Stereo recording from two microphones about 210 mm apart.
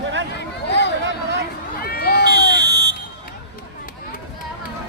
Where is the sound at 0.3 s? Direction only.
55° left (ahead or behind).